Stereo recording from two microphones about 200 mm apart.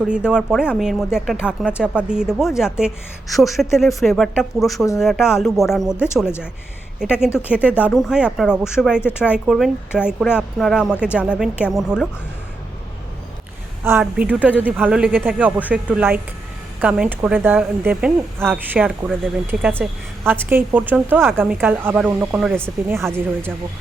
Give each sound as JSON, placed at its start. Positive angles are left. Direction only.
{"t": 0.0, "sound": "speech", "side_deg": -5}
{"t": 7.0, "sound": "speech", "side_deg": -5}
{"t": 13.8, "sound": "speech", "side_deg": -10}